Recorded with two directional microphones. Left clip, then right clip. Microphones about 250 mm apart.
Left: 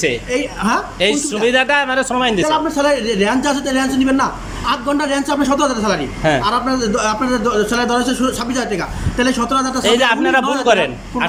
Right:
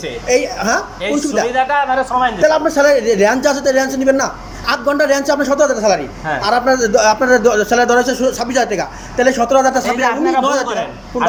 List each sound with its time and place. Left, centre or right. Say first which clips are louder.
0.3 s a woman's voice: right 4 dB; centre
1.5 s a man's voice: left 3 dB; left
2.5 s a man's voice: right 4 dB; centre
9.9 s a man's voice: left 1 dB; left
10.4 s a man's voice: right 3 dB; centre